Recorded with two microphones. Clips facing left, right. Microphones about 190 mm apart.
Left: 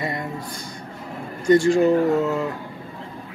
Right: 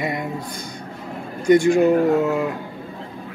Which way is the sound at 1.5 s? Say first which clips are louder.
Right 1 dB; 15° right (ahead or behind).